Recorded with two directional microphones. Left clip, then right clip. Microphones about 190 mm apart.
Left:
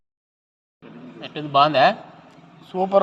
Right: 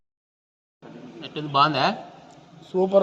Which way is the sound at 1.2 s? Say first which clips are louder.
Left 3 dB; 15° left (ahead or behind).